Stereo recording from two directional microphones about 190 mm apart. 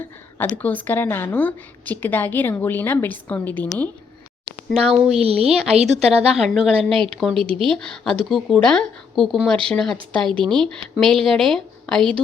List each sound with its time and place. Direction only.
0.3 s a woman's voice: 10° left (ahead or behind)
4.4 s speech: 5° right (ahead or behind)
5.2 s speech: 30° right (ahead or behind)
6.3 s speech: centre (ahead or behind)
7.3 s speech: 30° right (ahead or behind)
7.7 s speech: 5° left (ahead or behind)
10.2 s speech: 25° right (ahead or behind)
10.6 s speech: centre (ahead or behind)